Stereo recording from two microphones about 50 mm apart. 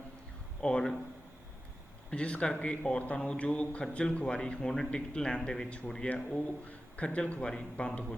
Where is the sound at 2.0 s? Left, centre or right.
Left.